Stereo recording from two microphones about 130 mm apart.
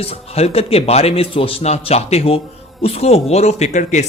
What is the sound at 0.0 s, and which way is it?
Speech, 50° left (ahead or behind).